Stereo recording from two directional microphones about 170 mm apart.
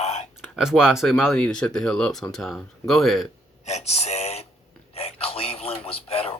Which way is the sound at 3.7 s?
40° left (ahead or behind).